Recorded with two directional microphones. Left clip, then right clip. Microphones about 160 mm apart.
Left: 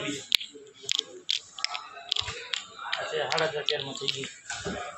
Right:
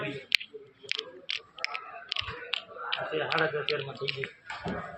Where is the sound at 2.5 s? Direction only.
40° right (ahead or behind); by 4.3 s 25° right (ahead or behind).